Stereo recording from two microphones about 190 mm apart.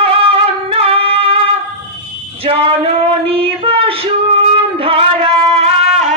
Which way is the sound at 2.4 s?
30° right (ahead or behind).